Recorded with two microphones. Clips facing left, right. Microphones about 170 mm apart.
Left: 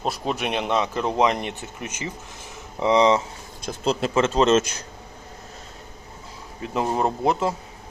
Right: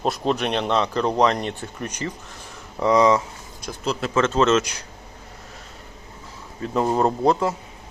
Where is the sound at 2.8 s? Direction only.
25° left (ahead or behind).